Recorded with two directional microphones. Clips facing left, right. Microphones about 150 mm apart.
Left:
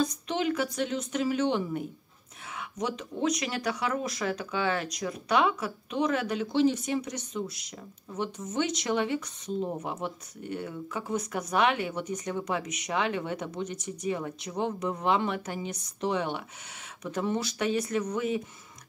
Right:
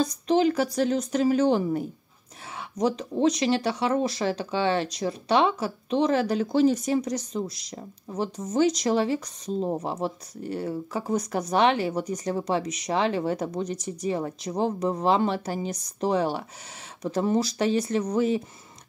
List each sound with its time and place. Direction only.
0.0 s speech: 35° right (ahead or behind)